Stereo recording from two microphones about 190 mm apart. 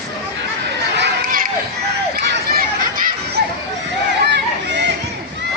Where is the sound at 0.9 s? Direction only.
55° right (ahead or behind).